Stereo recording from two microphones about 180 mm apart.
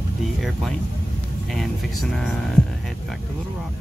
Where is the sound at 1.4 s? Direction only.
Centre (ahead or behind).